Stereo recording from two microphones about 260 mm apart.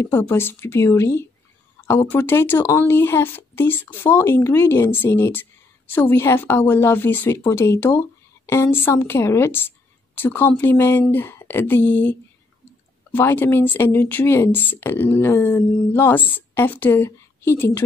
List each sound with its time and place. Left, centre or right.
0.0 s speech: centre